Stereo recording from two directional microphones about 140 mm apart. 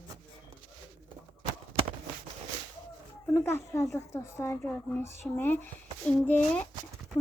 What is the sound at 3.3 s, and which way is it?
A woman's voice, 20° left (ahead or behind).